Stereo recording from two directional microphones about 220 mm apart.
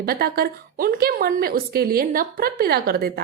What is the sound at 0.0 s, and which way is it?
Speech, 45° right (ahead or behind).